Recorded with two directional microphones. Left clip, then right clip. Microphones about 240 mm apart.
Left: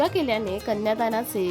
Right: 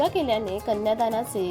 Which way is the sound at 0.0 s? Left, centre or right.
Centre.